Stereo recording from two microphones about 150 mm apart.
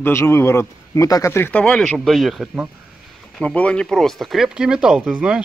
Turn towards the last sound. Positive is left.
turn(degrees=-5)  # may be behind; listen again after turning